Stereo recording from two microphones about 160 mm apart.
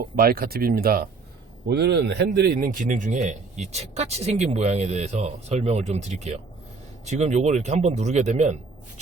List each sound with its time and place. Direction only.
0.0 s speech: 65° right (ahead or behind)
1.6 s speech: 90° right; by 8.5 s 45° right (ahead or behind)